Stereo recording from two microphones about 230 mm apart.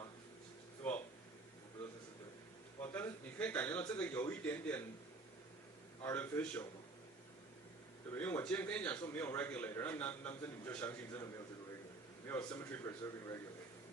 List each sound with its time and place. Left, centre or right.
0.8 s a sound: centre
2.9 s a man's voice: centre
6.0 s a man's voice: centre
8.1 s a man's voice: centre
12.3 s a man's voice: centre